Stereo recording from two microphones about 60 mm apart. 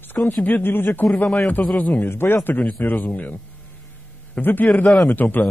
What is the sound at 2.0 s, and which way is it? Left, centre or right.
Speech, left.